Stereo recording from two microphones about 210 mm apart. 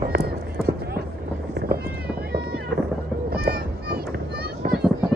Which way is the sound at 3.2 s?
45° right (ahead or behind).